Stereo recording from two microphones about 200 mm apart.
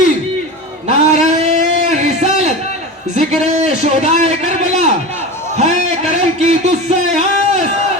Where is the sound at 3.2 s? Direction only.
35° right (ahead or behind).